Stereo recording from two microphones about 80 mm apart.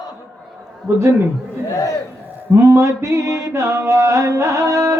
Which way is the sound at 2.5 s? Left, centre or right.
Right.